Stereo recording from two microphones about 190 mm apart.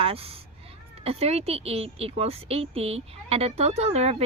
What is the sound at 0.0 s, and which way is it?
A woman's voice, 30° right (ahead or behind).